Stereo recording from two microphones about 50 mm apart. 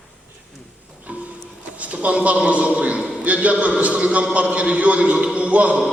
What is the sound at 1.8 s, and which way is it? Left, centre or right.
A man's voice, right.